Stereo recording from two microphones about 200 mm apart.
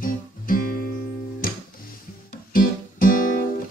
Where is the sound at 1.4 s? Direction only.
45° left (ahead or behind).